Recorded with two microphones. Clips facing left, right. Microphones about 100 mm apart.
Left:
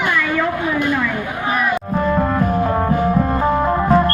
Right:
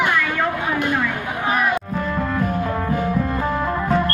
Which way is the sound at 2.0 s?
45° left (ahead or behind).